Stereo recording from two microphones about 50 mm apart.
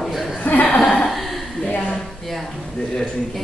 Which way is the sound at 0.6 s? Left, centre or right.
Centre.